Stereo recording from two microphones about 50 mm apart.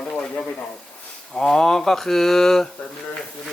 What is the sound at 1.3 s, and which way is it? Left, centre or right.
Speech, centre.